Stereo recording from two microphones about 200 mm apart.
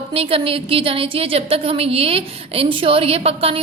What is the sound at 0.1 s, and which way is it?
A woman's voice, 30° right (ahead or behind).